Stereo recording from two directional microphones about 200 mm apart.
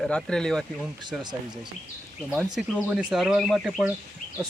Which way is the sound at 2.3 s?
Centre (ahead or behind).